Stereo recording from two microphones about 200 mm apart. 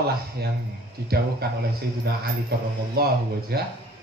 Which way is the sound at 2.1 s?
50° right (ahead or behind).